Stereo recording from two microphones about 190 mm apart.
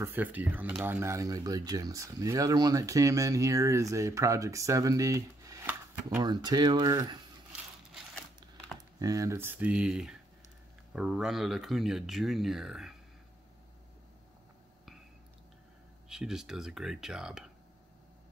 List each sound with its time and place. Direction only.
0.0 s speech: 10° right (ahead or behind)
9.0 s speech: 15° right (ahead or behind); by 12.9 s centre (ahead or behind)
16.1 s speech: 5° right (ahead or behind)